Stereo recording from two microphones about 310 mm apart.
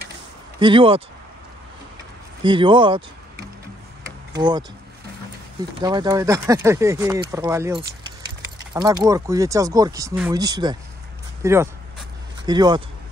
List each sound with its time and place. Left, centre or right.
0.6 s speech: centre
2.4 s speech: centre
4.4 s speech: centre
5.8 s speech: centre